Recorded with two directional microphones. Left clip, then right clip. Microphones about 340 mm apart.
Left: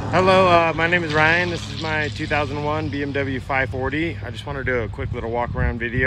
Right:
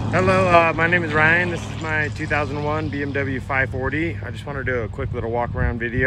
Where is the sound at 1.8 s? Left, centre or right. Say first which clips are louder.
Right 1 dB; centre.